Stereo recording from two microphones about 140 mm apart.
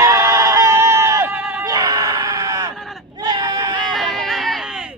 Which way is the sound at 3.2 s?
30° right (ahead or behind).